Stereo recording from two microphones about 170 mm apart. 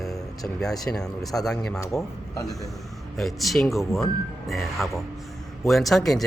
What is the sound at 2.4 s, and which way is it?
Speech, 20° left (ahead or behind).